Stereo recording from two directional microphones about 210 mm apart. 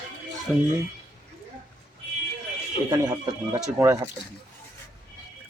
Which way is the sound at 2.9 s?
20° right (ahead or behind).